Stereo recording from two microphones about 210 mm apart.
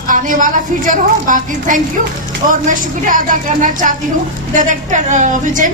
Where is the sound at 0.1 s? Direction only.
40° right (ahead or behind).